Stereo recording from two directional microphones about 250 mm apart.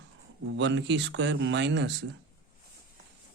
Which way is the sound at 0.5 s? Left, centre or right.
Right.